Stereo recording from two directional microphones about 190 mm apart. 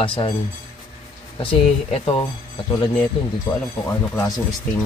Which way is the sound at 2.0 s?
30° left (ahead or behind).